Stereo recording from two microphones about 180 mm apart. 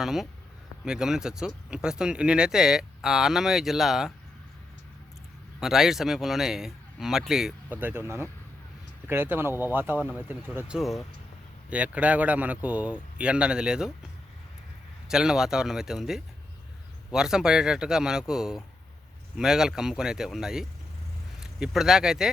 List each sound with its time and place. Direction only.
0.0 s speech: centre (ahead or behind)
5.5 s speech: centre (ahead or behind)
15.1 s speech: 5° right (ahead or behind)